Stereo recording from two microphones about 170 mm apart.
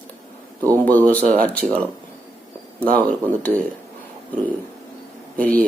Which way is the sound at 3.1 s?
10° left (ahead or behind).